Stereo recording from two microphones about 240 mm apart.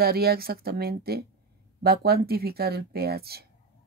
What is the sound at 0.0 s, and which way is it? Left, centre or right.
Speech, right.